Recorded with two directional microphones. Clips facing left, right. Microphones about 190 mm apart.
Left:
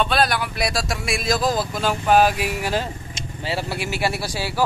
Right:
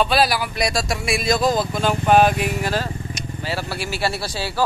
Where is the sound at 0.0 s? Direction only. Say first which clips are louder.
Right 2 dB; 5° right (ahead or behind).